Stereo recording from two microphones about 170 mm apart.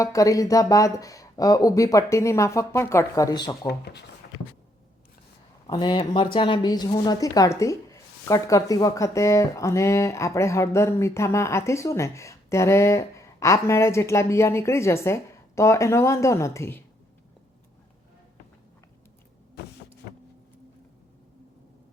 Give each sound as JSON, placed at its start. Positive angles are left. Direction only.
{"t": 0.0, "sound": "speech", "side_deg": 20}
{"t": 3.7, "sound": "speech", "side_deg": 75}
{"t": 5.6, "sound": "a woman's voice", "side_deg": 25}